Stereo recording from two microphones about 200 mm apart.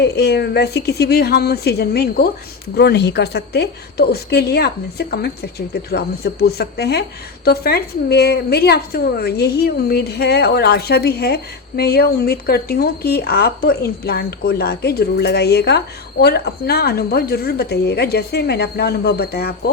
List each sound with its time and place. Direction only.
0.0 s a woman's voice: 55° left (ahead or behind)